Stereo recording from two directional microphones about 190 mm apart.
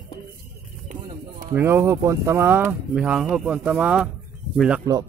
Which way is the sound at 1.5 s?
15° right (ahead or behind).